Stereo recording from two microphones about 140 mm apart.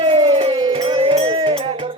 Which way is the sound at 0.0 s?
35° right (ahead or behind).